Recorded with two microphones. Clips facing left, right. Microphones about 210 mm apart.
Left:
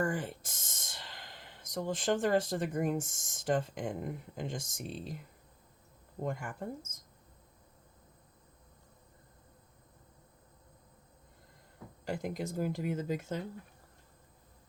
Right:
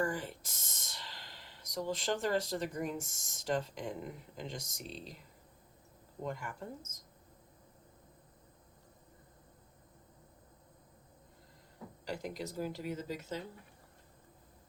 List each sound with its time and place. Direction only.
0.1 s speech: 50° left (ahead or behind)
6.2 s speech: 50° left (ahead or behind)
12.0 s speech: 50° left (ahead or behind)